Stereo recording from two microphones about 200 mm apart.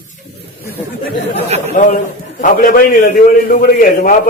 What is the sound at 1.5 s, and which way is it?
Speech, 35° right (ahead or behind).